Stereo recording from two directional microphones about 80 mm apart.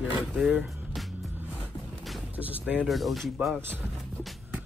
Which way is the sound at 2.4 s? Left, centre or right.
Centre.